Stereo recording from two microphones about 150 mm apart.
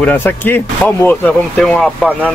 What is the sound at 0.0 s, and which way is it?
Speech, 15° left (ahead or behind).